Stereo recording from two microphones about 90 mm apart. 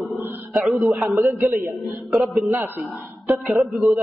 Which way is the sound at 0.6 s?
Centre (ahead or behind).